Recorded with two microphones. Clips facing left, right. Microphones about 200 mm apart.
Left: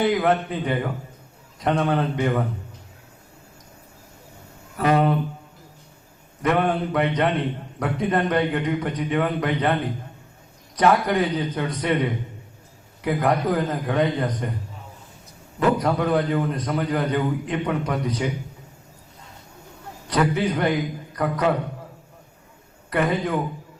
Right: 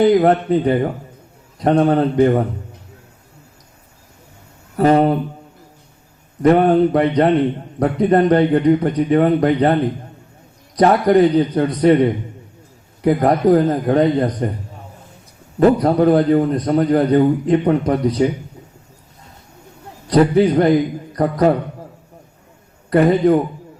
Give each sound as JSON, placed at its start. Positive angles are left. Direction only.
{"t": 0.0, "sound": "a man's voice", "side_deg": -35}
{"t": 4.8, "sound": "a man's voice", "side_deg": -35}
{"t": 6.4, "sound": "a man's voice", "side_deg": -35}
{"t": 10.8, "sound": "a man's voice", "side_deg": -35}
{"t": 15.5, "sound": "a man's voice", "side_deg": -35}
{"t": 20.1, "sound": "a man's voice", "side_deg": -35}
{"t": 22.9, "sound": "a man's voice", "side_deg": -35}